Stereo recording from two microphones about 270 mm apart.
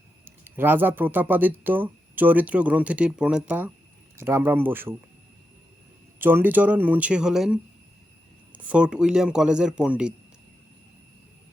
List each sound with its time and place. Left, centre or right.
0.3 s speech: centre
6.1 s speech: centre